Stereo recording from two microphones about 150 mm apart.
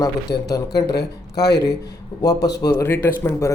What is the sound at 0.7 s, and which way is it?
Speech, 90° left.